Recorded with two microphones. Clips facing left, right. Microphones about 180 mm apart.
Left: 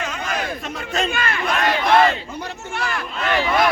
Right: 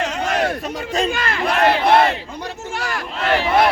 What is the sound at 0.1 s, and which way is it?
Crowd, 70° right (ahead or behind).